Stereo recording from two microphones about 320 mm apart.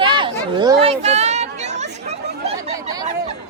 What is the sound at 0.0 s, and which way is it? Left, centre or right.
Chatter, centre.